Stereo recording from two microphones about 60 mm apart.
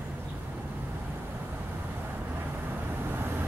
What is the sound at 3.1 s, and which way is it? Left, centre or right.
Vehicle, right.